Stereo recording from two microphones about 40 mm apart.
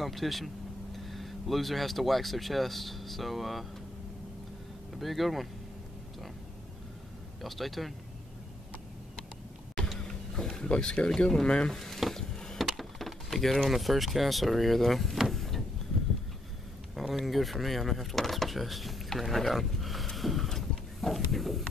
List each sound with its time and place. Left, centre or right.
0.0 s speech: centre
4.9 s speech: centre
7.4 s speech: centre
9.9 s vehicle: centre
11.1 s speech: left
11.7 s speech: centre
12.1 s a sound: centre
12.5 s speech: centre
15.3 s a sound: centre
17.1 s speech: centre
20.4 s a sound: centre